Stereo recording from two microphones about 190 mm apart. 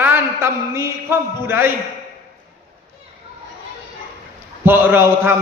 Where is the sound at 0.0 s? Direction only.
10° right (ahead or behind).